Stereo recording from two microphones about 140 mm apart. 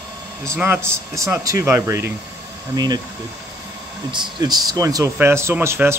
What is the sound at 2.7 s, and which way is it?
Speech, 30° right (ahead or behind).